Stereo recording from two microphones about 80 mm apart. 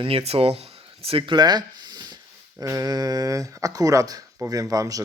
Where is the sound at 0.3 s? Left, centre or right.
Right.